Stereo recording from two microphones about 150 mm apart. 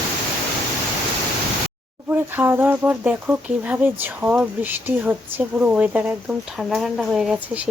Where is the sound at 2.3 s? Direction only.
15° right (ahead or behind).